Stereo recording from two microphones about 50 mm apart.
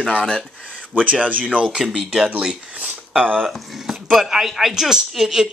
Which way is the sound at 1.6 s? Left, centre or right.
Centre.